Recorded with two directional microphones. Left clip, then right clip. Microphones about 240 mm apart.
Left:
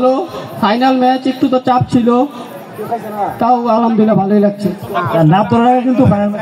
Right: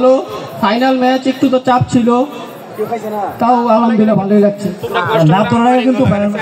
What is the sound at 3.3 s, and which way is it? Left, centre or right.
A man's voice, left.